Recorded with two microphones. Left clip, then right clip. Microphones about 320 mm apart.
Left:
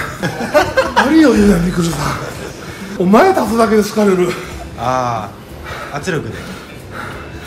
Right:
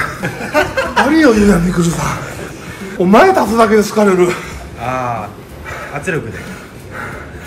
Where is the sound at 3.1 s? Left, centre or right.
Centre.